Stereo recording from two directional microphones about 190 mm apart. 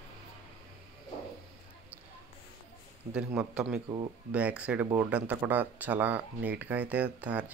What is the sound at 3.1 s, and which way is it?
A man's voice, 5° right (ahead or behind).